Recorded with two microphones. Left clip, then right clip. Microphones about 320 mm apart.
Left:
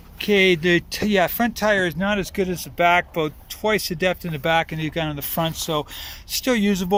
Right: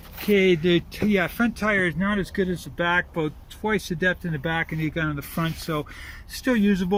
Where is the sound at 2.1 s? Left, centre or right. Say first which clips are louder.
Left 3 dB; left.